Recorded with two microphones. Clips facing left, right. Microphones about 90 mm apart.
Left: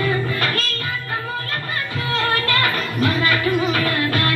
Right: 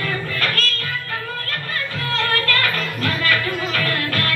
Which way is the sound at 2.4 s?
10° left (ahead or behind).